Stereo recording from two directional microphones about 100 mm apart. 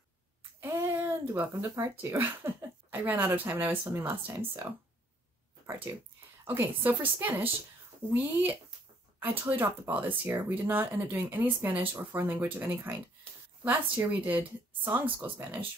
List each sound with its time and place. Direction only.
0.6 s speech: 25° right (ahead or behind)
5.9 s speech: 25° right (ahead or behind)
13.9 s speech: 15° right (ahead or behind)